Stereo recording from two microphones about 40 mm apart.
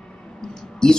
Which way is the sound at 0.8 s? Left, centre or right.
Centre.